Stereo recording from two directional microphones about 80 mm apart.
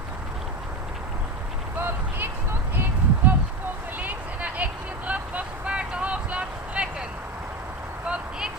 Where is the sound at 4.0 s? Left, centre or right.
Centre.